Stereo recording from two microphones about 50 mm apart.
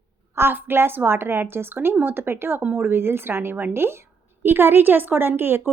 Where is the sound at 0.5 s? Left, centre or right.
Right.